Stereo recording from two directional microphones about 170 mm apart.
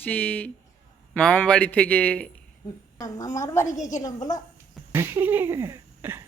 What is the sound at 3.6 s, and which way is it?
Speech, 45° left (ahead or behind).